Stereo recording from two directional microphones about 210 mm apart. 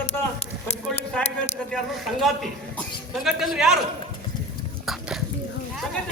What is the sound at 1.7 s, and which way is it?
Speech, centre (ahead or behind).